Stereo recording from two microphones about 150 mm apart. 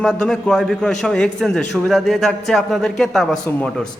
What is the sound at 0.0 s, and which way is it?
A man's voice, 5° left (ahead or behind).